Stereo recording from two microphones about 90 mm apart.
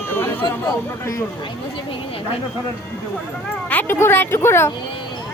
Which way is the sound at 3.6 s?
20° left (ahead or behind).